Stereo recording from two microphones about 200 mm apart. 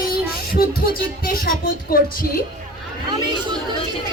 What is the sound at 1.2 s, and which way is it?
Speech, 45° left (ahead or behind).